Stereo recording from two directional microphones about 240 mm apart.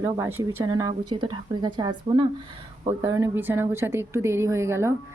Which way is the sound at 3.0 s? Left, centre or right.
Centre.